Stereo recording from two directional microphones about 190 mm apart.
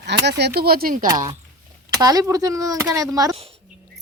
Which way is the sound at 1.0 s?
20° right (ahead or behind).